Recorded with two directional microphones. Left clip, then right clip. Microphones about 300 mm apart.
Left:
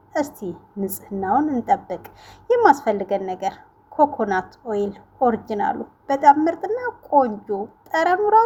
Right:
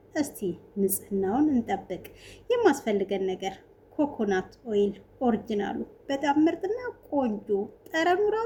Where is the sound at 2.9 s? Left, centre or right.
Left.